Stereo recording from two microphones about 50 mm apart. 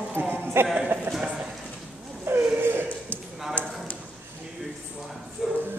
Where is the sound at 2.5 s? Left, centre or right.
Right.